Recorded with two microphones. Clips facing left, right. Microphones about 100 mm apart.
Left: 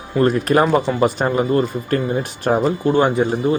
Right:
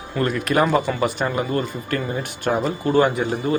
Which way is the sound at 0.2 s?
35° left (ahead or behind).